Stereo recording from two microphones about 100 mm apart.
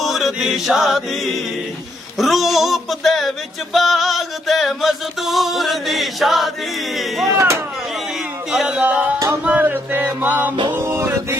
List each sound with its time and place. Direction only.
0.0 s chant: centre (ahead or behind)
2.1 s music: centre (ahead or behind)
7.3 s music: 25° right (ahead or behind)
8.5 s music: 10° right (ahead or behind)
10.5 s music: 50° right (ahead or behind)
10.8 s mantra: 25° right (ahead or behind)